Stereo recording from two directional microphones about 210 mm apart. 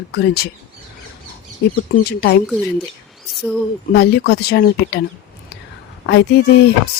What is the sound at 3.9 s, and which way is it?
Speech, 50° left (ahead or behind).